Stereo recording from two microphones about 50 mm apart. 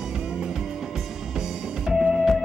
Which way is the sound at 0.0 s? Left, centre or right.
Centre.